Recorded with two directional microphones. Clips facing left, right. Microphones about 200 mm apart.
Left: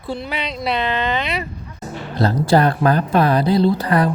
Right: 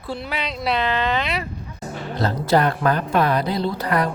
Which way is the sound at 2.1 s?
35° left (ahead or behind).